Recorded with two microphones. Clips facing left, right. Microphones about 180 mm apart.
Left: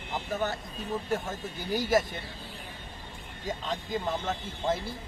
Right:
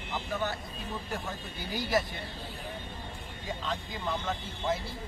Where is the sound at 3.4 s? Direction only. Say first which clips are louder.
Left 3 dB; 40° left (ahead or behind).